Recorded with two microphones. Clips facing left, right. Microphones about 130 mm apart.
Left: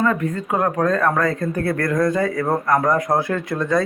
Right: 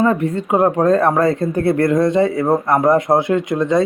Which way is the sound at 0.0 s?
30° right (ahead or behind).